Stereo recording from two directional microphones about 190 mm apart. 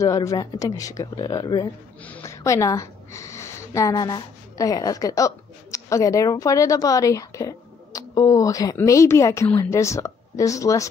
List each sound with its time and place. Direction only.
0.0 s a woman's voice: 15° left (ahead or behind)